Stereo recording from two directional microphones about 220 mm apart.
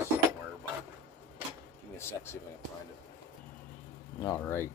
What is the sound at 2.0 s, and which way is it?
Speech, 10° left (ahead or behind).